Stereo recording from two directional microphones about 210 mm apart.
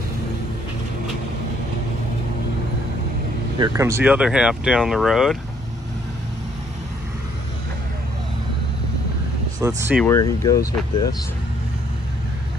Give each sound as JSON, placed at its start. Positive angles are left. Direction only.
{"t": 3.5, "sound": "speech", "side_deg": -15}
{"t": 9.6, "sound": "speech", "side_deg": -15}
{"t": 10.0, "sound": "speech", "side_deg": 15}